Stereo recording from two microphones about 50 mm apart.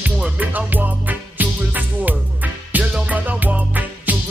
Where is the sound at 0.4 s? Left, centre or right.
Right.